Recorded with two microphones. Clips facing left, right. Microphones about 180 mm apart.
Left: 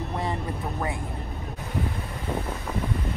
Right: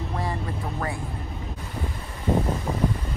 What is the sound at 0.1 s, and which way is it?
Vehicle, 20° left (ahead or behind).